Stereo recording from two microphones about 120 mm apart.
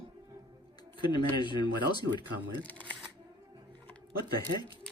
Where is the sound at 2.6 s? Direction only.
10° left (ahead or behind).